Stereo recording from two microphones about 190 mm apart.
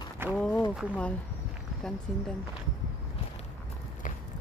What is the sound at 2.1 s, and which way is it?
Speech, centre (ahead or behind).